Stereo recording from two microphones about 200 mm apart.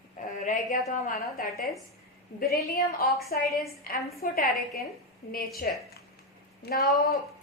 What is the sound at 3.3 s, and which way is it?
A woman's voice, 45° left (ahead or behind).